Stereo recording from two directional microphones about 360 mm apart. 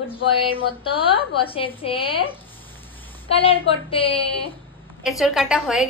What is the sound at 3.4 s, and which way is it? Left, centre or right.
Speech, centre.